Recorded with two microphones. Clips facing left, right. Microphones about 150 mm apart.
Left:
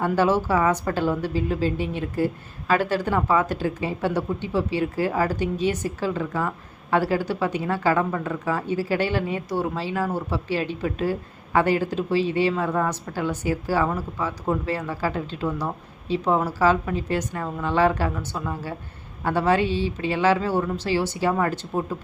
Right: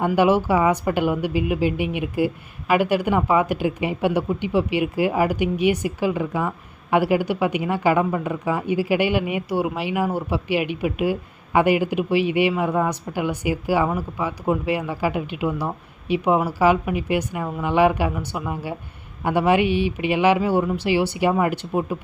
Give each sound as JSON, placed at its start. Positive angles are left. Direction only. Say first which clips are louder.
{"t": 0.1, "sound": "speech", "louder": "right 3 dB", "side_deg": -15}